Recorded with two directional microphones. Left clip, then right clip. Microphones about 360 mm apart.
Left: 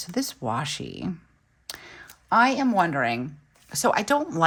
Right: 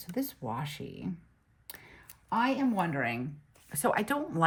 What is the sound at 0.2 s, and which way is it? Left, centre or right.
Speech, centre.